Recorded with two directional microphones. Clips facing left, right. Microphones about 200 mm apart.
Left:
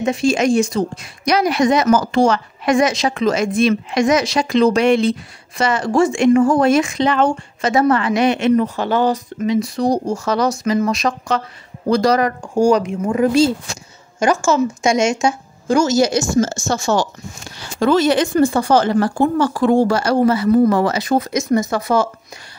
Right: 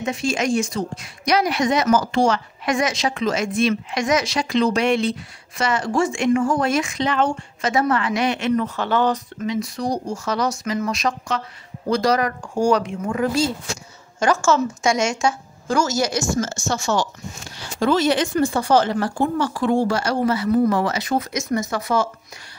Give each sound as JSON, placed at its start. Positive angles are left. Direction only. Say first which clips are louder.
{"t": 0.0, "sound": "a woman's voice", "louder": "left 6 dB", "side_deg": 30}
{"t": 1.2, "sound": "speech", "louder": "left 4 dB", "side_deg": 45}
{"t": 2.6, "sound": "a woman's voice", "louder": "left 7 dB", "side_deg": 35}
{"t": 9.5, "sound": "a woman's voice", "louder": "left 7 dB", "side_deg": 30}
{"t": 12.5, "sound": "a woman's voice", "louder": "left 4 dB", "side_deg": 15}
{"t": 17.7, "sound": "speech", "louder": "left 4 dB", "side_deg": 55}